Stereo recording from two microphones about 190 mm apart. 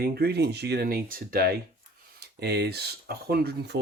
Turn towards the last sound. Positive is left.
turn(degrees=-60)  # may be behind; listen again after turning